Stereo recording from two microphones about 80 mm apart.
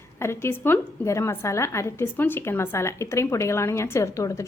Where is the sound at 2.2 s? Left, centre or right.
Left.